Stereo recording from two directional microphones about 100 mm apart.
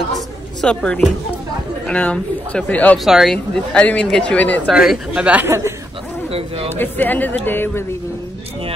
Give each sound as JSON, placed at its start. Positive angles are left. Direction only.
{"t": 0.6, "sound": "speech", "side_deg": 10}
{"t": 3.1, "sound": "speech", "side_deg": 0}
{"t": 3.5, "sound": "speech", "side_deg": 15}
{"t": 4.6, "sound": "speech", "side_deg": -5}
{"t": 6.7, "sound": "speech", "side_deg": 20}